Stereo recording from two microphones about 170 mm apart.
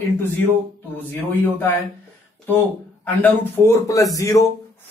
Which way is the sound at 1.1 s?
15° left (ahead or behind).